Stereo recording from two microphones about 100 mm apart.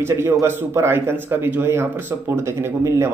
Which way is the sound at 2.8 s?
30° right (ahead or behind).